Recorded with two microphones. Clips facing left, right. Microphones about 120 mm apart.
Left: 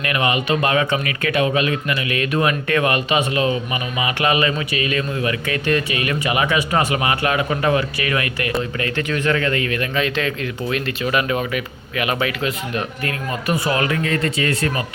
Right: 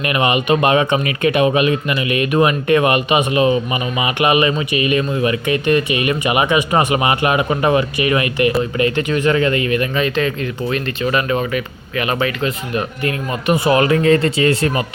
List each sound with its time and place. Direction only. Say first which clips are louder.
0.0 s speech: right 4 dB; 20° right (ahead or behind); by 12.8 s centre (ahead or behind)
13.7 s speech: right 10 dB; 30° right (ahead or behind)